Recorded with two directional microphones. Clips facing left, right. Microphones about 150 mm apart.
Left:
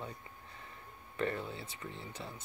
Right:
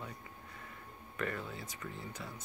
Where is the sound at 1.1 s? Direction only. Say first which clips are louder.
Left 3 dB; 30° left (ahead or behind).